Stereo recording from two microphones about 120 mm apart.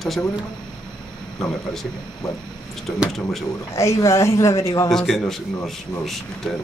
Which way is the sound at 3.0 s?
Centre (ahead or behind).